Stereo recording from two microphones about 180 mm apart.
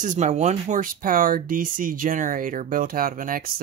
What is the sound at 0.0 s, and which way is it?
Speech, 40° right (ahead or behind).